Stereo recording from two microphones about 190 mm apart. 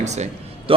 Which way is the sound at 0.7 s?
30° right (ahead or behind).